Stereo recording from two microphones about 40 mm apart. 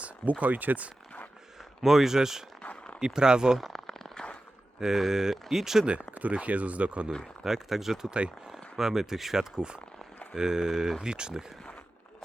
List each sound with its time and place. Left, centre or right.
0.0 s speech: right
1.8 s speech: centre
3.7 s a sound: centre
4.8 s speech: centre
6.1 s speech: right
7.4 s speech: centre